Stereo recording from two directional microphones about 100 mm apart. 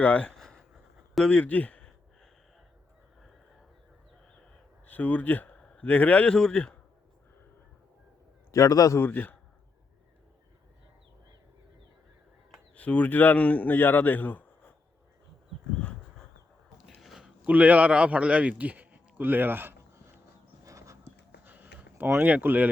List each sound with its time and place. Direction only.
0.0 s a sound: 15° left (ahead or behind)
1.1 s speech: 10° left (ahead or behind)
4.9 s speech: 15° left (ahead or behind)
8.5 s a man's voice: 35° left (ahead or behind)
9.0 s a man's voice: 15° left (ahead or behind)
12.7 s a man's voice: 15° left (ahead or behind)
15.8 s dog: 10° left (ahead or behind)
16.7 s a sound: centre (ahead or behind); by 20.0 s 20° right (ahead or behind)
20.7 s horse: 30° right (ahead or behind)
21.4 s a sound: 20° right (ahead or behind)